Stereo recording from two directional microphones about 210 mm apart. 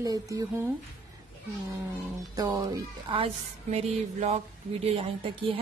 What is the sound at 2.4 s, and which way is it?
Speech, 15° right (ahead or behind).